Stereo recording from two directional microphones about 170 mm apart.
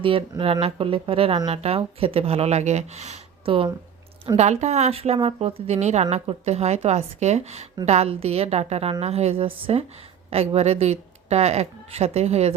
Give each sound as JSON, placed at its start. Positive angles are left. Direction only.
{"t": 0.0, "sound": "a woman's voice", "side_deg": -30}